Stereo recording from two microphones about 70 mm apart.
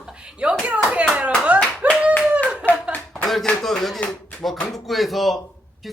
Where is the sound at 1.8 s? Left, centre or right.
Right.